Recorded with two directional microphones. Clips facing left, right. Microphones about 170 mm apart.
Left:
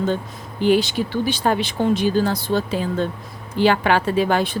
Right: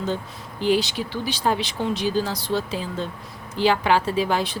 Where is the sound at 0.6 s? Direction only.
55° left (ahead or behind).